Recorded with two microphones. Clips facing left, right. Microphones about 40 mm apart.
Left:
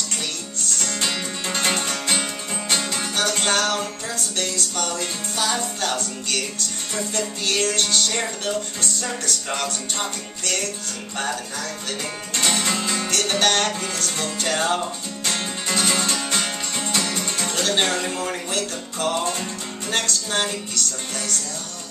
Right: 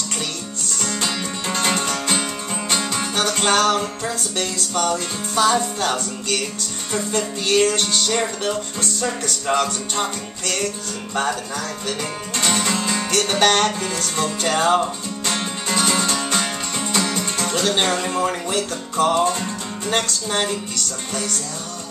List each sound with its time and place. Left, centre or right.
0.9 s music: centre
3.2 s music: right
12.4 s music: centre
13.1 s music: centre
15.7 s music: centre
17.5 s music: centre